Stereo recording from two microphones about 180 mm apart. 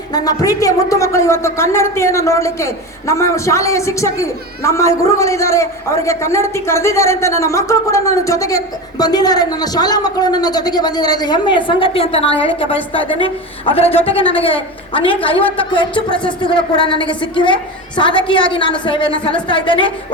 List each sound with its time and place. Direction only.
0.1 s a woman's voice: 20° left (ahead or behind)